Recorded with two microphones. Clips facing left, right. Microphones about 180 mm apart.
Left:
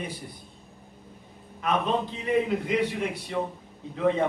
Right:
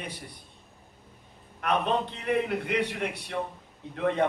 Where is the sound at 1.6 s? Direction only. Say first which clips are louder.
Left 1 dB; 65° right (ahead or behind).